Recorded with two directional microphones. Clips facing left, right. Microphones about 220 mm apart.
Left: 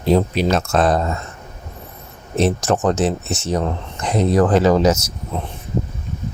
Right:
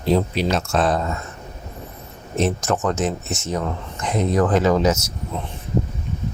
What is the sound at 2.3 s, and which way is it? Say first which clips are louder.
Speech: left 3 dB; 35° left (ahead or behind).